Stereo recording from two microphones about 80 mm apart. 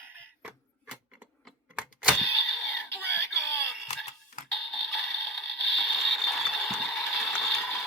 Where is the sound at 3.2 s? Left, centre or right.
Left.